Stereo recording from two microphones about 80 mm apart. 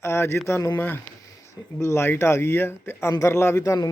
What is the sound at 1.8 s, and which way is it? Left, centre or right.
Speech, left.